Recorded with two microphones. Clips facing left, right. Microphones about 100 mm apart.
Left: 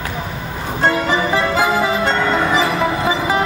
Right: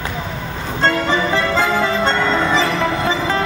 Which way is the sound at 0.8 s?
15° left (ahead or behind).